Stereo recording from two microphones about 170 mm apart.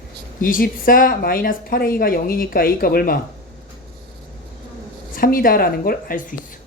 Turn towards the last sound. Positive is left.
turn(degrees=60)  # may be behind; listen again after turning